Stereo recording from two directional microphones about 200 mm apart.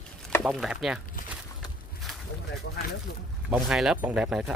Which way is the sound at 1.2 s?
40° left (ahead or behind).